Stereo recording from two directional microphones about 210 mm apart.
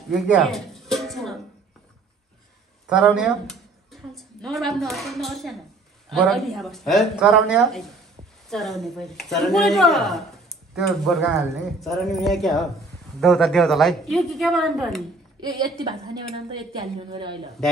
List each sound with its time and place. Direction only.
0.1 s music: centre (ahead or behind)
2.9 s speech: 5° right (ahead or behind)
15.8 s a woman's voice: 20° right (ahead or behind)